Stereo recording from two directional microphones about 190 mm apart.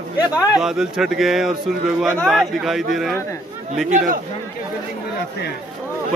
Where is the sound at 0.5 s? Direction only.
Centre (ahead or behind).